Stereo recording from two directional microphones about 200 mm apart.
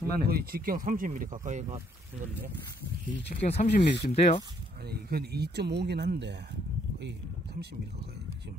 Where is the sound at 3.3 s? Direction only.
40° left (ahead or behind).